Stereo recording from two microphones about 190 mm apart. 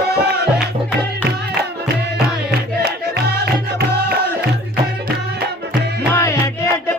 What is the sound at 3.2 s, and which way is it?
Music, 55° right (ahead or behind).